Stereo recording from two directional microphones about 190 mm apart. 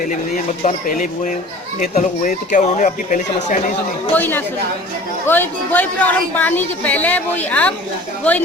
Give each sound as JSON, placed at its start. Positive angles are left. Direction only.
{"t": 0.6, "sound": "speech", "side_deg": 45}
{"t": 4.1, "sound": "speech", "side_deg": 10}